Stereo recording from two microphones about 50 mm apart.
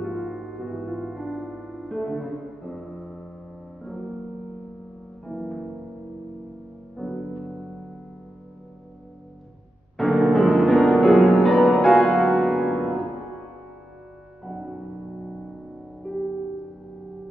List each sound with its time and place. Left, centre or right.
0.0 s music: centre
5.2 s music: centre
7.0 s music: centre
9.9 s music: centre
12.1 s music: centre
12.4 s music: centre
14.6 s music: right
15.2 s music: centre